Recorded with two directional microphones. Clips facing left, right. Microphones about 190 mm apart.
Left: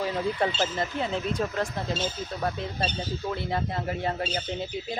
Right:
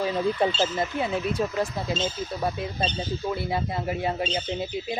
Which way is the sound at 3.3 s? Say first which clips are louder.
Right 2 dB; 10° right (ahead or behind).